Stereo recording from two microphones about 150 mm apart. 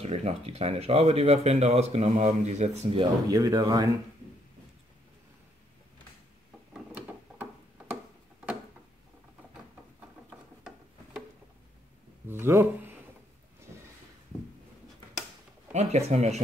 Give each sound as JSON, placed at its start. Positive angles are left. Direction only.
{"t": 0.0, "sound": "speech", "side_deg": -45}
{"t": 3.3, "sound": "speech", "side_deg": -25}
{"t": 6.7, "sound": "mechanisms", "side_deg": -10}
{"t": 12.3, "sound": "a sound", "side_deg": -15}
{"t": 15.7, "sound": "speech", "side_deg": -50}